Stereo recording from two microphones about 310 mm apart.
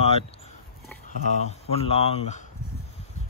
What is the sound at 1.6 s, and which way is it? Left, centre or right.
Speech, centre.